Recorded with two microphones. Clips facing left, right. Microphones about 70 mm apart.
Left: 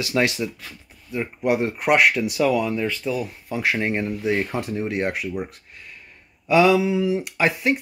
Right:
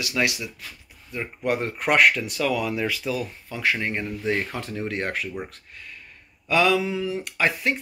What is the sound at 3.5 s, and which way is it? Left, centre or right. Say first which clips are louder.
Speech: left 3 dB; left.